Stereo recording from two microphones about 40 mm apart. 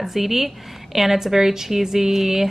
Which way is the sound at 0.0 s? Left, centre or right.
Centre.